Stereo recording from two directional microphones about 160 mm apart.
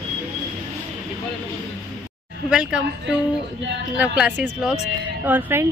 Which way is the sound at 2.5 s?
5° right (ahead or behind).